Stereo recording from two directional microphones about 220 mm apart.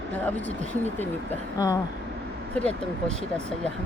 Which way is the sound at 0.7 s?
10° left (ahead or behind).